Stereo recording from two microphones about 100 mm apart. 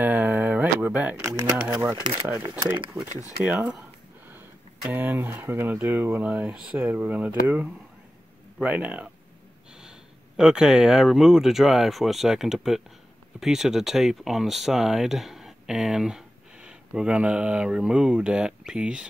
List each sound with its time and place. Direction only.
0.0 s a sound: 15° right (ahead or behind)
2.2 s speech: 20° right (ahead or behind)
2.9 s speech: 55° right (ahead or behind)
3.4 s speech: 10° right (ahead or behind)